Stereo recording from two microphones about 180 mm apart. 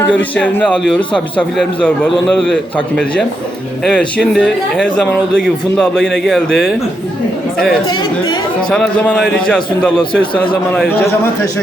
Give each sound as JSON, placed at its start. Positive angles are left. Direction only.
{"t": 0.1, "sound": "a man's voice", "side_deg": 5}
{"t": 7.9, "sound": "speech", "side_deg": 25}
{"t": 8.7, "sound": "a man's voice", "side_deg": 5}